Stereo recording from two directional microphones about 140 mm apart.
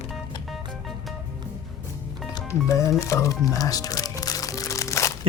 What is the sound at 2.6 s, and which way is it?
Speech, 25° left (ahead or behind).